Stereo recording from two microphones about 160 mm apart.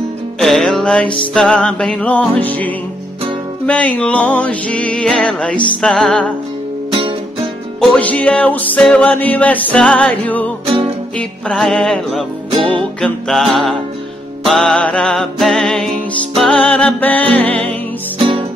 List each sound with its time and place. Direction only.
0.4 s music: centre (ahead or behind)
7.8 s music: 10° left (ahead or behind)
12.4 s music: 35° right (ahead or behind)
13.0 s music: centre (ahead or behind)